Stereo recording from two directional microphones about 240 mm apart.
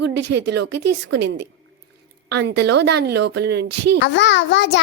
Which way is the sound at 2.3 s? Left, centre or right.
Right.